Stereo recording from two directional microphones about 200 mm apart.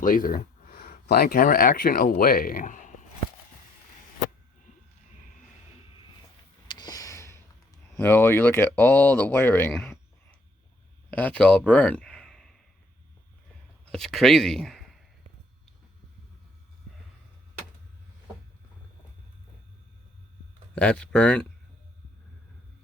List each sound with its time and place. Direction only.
0.0 s speech: 45° left (ahead or behind)
6.7 s a sound: 20° left (ahead or behind)
7.9 s speech: 10° left (ahead or behind)
11.1 s speech: 10° left (ahead or behind)
13.9 s speech: centre (ahead or behind)
20.7 s speech: 5° left (ahead or behind)